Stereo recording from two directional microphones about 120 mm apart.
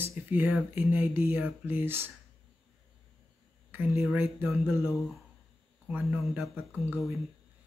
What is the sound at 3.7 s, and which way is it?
Speech, 15° right (ahead or behind).